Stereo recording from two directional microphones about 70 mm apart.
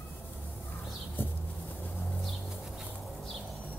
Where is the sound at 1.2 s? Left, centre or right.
Left.